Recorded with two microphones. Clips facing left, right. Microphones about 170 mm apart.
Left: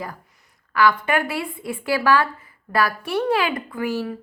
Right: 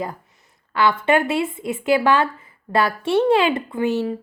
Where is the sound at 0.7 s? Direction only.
25° right (ahead or behind).